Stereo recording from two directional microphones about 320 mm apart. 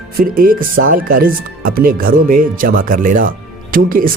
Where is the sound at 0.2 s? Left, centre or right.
Right.